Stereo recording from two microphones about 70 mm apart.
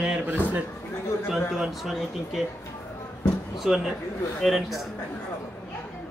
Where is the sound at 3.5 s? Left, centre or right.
Centre.